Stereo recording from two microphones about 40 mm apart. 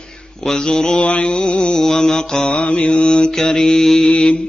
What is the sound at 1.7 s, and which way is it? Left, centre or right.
Mantra, centre.